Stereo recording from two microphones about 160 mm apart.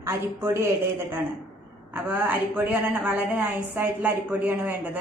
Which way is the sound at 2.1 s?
10° right (ahead or behind).